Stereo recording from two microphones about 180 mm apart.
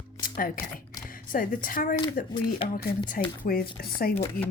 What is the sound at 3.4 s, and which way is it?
Speech, 55° left (ahead or behind).